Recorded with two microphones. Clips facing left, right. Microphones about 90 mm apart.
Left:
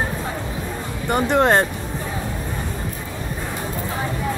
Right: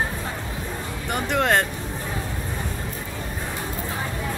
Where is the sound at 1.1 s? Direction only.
30° left (ahead or behind).